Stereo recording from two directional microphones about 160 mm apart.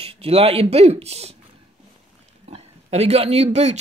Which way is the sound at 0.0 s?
35° right (ahead or behind).